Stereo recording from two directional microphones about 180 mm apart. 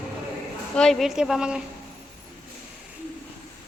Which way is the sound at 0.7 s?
Centre (ahead or behind).